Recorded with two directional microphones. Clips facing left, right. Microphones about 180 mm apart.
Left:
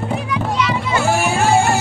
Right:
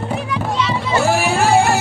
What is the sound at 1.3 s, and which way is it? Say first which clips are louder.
Music: right 1 dB; 60° right (ahead or behind).